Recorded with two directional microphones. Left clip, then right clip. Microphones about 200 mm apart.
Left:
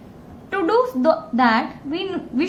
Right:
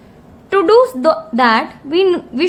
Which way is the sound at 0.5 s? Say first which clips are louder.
Right 9 dB; 50° right (ahead or behind).